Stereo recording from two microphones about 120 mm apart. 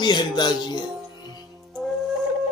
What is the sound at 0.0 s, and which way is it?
Music, 40° left (ahead or behind).